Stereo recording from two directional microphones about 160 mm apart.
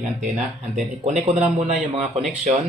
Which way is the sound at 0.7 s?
40° right (ahead or behind).